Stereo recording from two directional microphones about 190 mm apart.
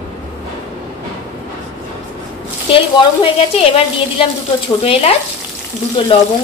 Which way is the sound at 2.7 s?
30° left (ahead or behind).